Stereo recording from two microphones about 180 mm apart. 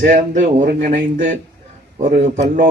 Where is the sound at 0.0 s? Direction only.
50° right (ahead or behind).